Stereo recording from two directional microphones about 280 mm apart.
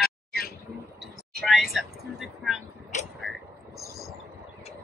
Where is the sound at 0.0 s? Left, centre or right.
Left.